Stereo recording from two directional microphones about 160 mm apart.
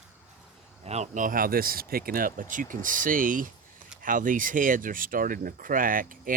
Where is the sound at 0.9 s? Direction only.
45° right (ahead or behind).